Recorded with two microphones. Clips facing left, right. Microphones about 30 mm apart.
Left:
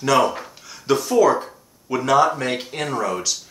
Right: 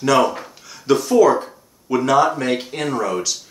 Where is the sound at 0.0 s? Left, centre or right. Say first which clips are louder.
Right 2 dB; centre.